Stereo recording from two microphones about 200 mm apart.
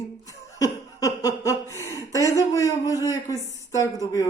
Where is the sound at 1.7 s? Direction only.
15° right (ahead or behind).